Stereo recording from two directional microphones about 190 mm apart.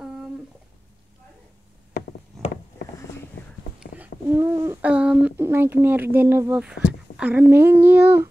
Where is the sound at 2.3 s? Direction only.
Centre (ahead or behind).